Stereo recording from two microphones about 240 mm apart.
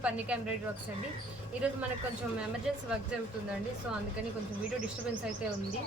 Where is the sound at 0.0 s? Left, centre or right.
Centre.